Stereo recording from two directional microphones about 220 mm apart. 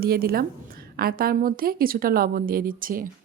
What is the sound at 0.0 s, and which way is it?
A woman's voice, 45° right (ahead or behind).